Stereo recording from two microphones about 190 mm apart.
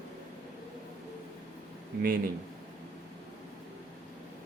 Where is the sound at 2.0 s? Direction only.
50° right (ahead or behind).